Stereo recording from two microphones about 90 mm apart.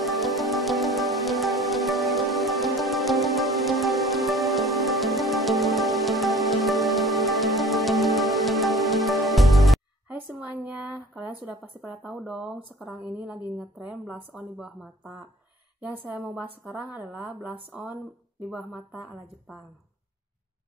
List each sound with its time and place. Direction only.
0.0 s music: centre (ahead or behind)
10.0 s a sound: 20° right (ahead or behind)
12.1 s a woman's voice: 10° right (ahead or behind)
18.5 s speech: 5° right (ahead or behind)